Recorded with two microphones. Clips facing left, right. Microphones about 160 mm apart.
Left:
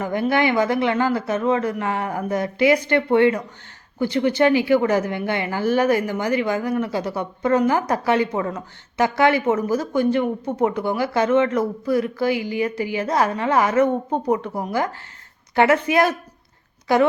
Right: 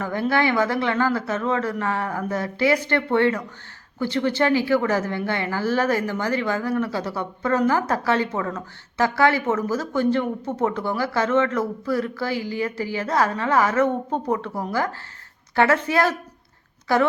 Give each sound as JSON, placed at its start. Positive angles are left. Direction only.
{"t": 0.0, "sound": "a woman's voice", "side_deg": 15}